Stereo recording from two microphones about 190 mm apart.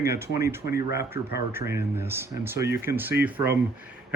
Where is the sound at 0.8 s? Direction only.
55° left (ahead or behind).